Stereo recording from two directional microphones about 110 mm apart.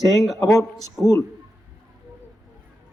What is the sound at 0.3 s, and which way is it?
Speech, 30° left (ahead or behind).